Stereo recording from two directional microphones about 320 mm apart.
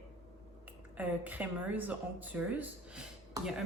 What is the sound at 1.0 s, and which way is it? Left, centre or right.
A woman's voice, centre.